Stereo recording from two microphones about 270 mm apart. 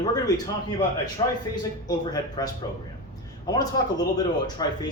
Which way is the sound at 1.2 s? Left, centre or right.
Centre.